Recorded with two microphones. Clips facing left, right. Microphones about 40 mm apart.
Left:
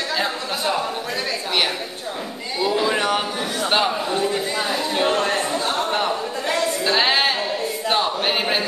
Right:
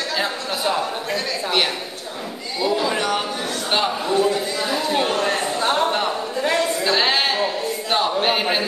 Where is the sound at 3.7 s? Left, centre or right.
Centre.